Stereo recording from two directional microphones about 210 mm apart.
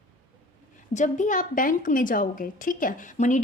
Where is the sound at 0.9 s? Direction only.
35° left (ahead or behind).